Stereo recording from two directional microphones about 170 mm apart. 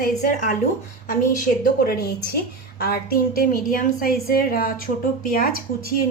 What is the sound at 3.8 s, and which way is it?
A woman's voice, 60° left (ahead or behind).